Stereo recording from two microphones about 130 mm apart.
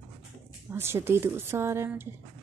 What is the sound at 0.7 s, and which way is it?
A woman's voice, 20° right (ahead or behind).